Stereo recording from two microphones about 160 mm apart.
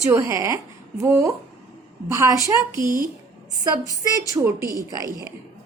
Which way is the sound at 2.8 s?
60° right (ahead or behind).